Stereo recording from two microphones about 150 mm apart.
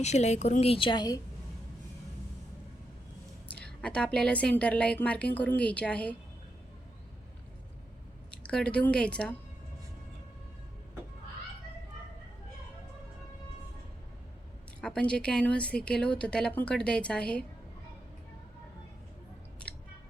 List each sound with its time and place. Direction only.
0.0 s a woman's voice: 50° left (ahead or behind); by 1.2 s 25° left (ahead or behind)
3.5 s a woman's voice: 5° left (ahead or behind)
8.4 s a woman's voice: 5° left (ahead or behind)
14.8 s a woman's voice: 5° left (ahead or behind)